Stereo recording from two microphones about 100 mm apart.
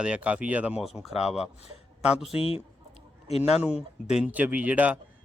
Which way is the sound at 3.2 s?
90° left.